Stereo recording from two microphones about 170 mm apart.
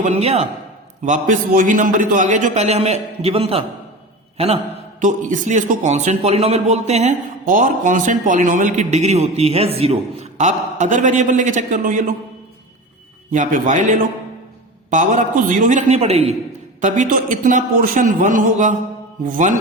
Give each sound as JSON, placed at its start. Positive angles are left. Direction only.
{"t": 0.0, "sound": "a man's voice", "side_deg": -40}
{"t": 1.0, "sound": "a man's voice", "side_deg": -50}
{"t": 4.9, "sound": "a man's voice", "side_deg": -50}
{"t": 13.3, "sound": "a man's voice", "side_deg": -50}
{"t": 16.8, "sound": "a man's voice", "side_deg": -50}